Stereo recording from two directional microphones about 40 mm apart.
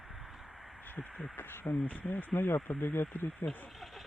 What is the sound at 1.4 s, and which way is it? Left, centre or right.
Speech, left.